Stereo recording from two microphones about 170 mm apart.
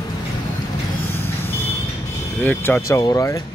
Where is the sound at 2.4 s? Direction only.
10° left (ahead or behind).